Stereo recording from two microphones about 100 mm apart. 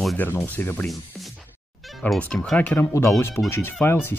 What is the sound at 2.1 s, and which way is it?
Speech, 5° left (ahead or behind).